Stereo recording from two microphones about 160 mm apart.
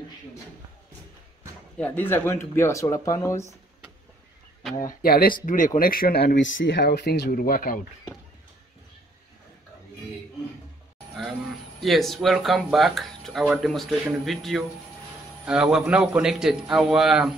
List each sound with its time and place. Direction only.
1.8 s speech: 10° left (ahead or behind)
4.8 s speech: 65° left (ahead or behind)
5.4 s speech: 55° left (ahead or behind)
11.8 s speech: centre (ahead or behind)